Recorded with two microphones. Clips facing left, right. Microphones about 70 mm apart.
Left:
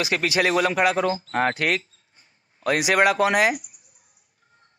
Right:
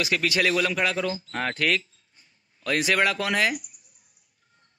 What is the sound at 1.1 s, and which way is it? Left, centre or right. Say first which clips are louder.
Speech: left 7 dB; left.